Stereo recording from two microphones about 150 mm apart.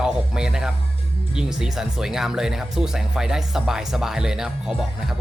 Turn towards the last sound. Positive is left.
turn(degrees=0)  # may be behind; listen again after turning